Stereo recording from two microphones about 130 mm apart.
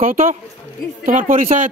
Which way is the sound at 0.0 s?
90° right.